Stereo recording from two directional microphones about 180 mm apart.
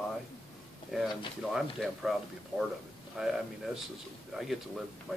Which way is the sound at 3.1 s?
5° right (ahead or behind).